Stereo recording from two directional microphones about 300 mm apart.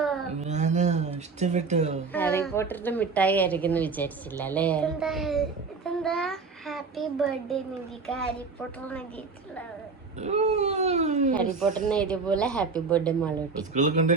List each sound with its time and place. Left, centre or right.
0.0 s a sound: centre
0.3 s a sound: right
2.1 s a woman's voice: centre
10.2 s speech: right
11.6 s a woman's voice: centre
13.7 s speech: right